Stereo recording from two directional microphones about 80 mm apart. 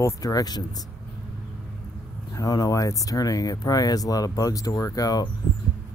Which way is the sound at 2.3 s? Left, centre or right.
Left.